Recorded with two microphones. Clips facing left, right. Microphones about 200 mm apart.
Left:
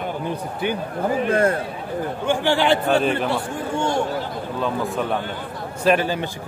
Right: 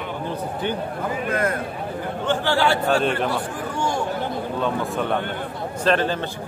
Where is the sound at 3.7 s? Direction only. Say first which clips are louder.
Left 3 dB; 25° left (ahead or behind).